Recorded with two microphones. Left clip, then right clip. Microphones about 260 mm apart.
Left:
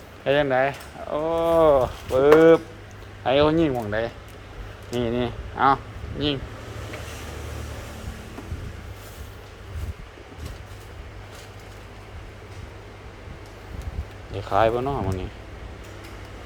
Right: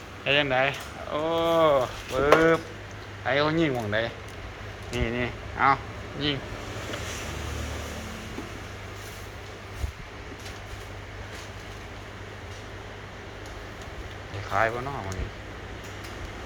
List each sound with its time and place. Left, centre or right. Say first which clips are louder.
0.3 s speech: left 3 dB; left
14.5 s speech: left 5 dB; left